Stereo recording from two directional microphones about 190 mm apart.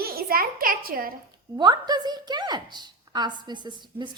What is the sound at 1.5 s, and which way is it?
A woman's voice, 25° right (ahead or behind).